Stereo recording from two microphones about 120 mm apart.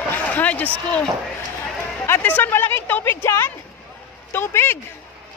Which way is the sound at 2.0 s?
15° left (ahead or behind).